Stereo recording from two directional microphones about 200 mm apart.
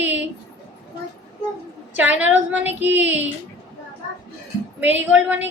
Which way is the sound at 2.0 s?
10° right (ahead or behind).